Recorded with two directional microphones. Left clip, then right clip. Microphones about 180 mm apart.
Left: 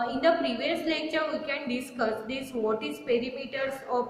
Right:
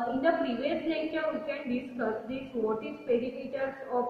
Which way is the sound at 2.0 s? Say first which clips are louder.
Left 5 dB; 15° left (ahead or behind).